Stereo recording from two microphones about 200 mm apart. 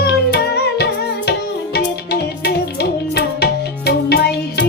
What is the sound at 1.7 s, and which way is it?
Music, 55° left (ahead or behind).